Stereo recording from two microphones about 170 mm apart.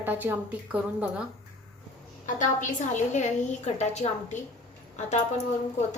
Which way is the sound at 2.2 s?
50° left (ahead or behind).